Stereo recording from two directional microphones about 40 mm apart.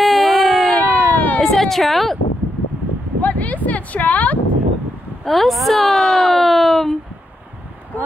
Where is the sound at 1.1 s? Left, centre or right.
Left.